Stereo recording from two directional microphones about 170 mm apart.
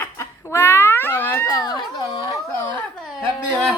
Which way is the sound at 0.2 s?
15° left (ahead or behind).